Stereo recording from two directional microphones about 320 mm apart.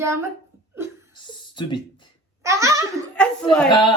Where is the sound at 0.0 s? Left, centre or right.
Centre.